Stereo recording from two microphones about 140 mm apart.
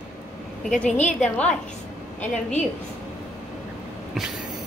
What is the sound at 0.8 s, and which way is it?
Speech, 55° left (ahead or behind).